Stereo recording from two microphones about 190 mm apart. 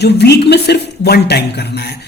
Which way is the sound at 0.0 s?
60° left (ahead or behind).